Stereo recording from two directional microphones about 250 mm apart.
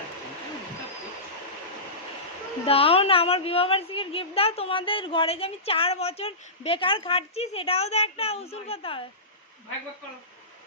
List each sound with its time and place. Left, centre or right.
2.6 s a woman's voice: left